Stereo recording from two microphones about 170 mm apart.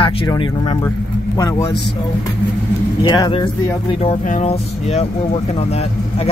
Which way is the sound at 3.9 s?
35° left (ahead or behind).